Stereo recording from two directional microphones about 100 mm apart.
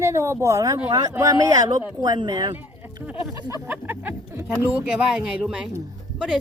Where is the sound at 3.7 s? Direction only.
20° right (ahead or behind).